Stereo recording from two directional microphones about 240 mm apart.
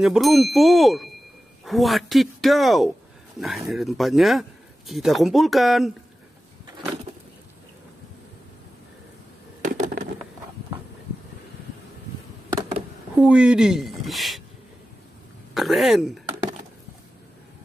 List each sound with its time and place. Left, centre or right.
0.0 s speech: centre
9.6 s a sound: right
13.1 s speech: centre
15.5 s speech: centre